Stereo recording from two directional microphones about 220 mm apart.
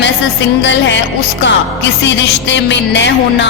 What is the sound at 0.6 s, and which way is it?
Music, 55° left (ahead or behind).